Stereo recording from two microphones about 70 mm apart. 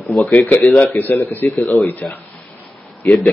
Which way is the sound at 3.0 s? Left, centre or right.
Left.